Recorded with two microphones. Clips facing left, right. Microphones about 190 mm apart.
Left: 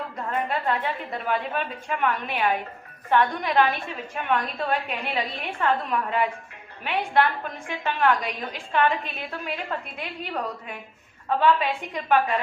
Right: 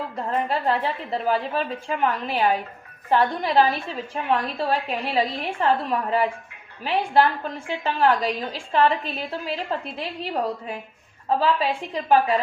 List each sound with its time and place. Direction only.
0.2 s a woman's voice: 30° right (ahead or behind)